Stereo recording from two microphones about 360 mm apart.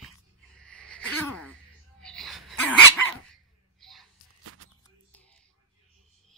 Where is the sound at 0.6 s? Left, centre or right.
Centre.